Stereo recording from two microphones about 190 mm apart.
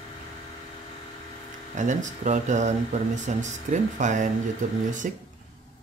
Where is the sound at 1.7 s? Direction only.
40° right (ahead or behind).